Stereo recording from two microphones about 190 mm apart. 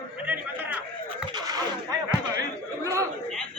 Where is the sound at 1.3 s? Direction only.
20° right (ahead or behind).